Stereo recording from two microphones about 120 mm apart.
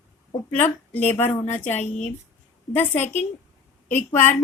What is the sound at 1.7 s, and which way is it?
Speech, 70° left (ahead or behind).